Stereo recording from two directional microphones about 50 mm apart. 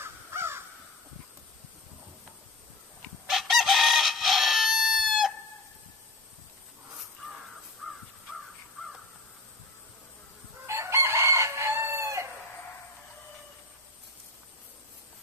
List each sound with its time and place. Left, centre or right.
0.0 s crow: right
3.3 s chicken: centre
7.8 s crow: centre
10.7 s chicken: right